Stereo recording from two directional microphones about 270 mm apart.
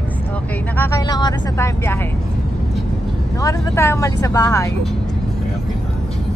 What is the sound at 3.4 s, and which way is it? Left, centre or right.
Speech, centre.